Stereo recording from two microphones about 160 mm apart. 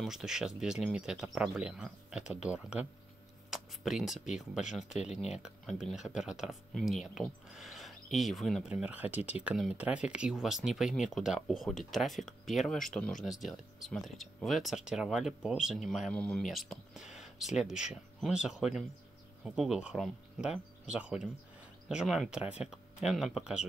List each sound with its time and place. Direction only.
0.0 s speech: 5° right (ahead or behind)
4.9 s speech: 45° left (ahead or behind)
5.3 s speech: 5° right (ahead or behind)